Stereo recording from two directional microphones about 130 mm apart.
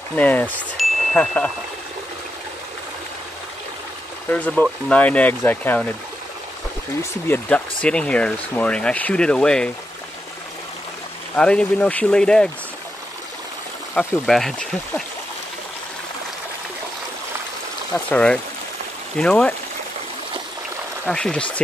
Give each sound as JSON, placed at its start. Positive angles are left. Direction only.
{"t": 0.1, "sound": "speech", "side_deg": 10}
{"t": 0.8, "sound": "chime", "side_deg": 0}
{"t": 1.1, "sound": "speech", "side_deg": 10}
{"t": 4.3, "sound": "speech", "side_deg": 10}
{"t": 7.0, "sound": "speech", "side_deg": 15}
{"t": 11.3, "sound": "speech", "side_deg": 5}
{"t": 13.9, "sound": "speech", "side_deg": 0}
{"t": 17.9, "sound": "speech", "side_deg": 10}
{"t": 21.1, "sound": "speech", "side_deg": 5}